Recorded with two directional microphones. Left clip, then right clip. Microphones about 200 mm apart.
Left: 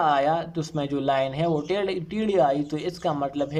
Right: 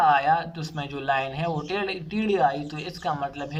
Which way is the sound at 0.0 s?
30° left (ahead or behind).